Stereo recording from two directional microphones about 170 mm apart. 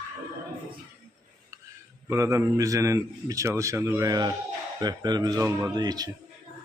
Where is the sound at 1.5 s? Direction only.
20° right (ahead or behind).